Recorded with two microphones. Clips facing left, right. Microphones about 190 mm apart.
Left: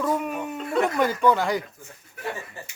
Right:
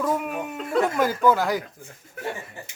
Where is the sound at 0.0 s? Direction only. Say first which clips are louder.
Even; 5° right (ahead or behind).